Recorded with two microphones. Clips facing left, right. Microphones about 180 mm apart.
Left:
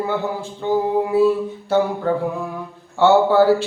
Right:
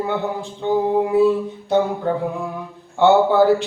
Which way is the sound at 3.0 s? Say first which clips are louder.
Even; 15° right (ahead or behind).